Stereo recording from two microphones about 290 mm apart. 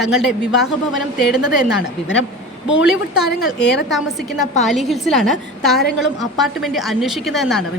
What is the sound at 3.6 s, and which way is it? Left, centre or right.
Speech, left.